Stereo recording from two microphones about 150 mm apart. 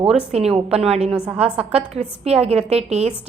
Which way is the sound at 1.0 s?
5° right (ahead or behind).